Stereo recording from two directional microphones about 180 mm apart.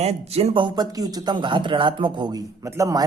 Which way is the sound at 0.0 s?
35° right (ahead or behind).